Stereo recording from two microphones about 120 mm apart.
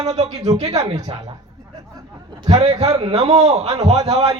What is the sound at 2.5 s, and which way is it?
A man's voice, 60° right (ahead or behind).